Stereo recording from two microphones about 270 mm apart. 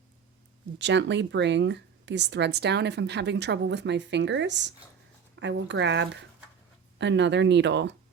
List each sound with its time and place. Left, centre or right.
0.8 s speech: right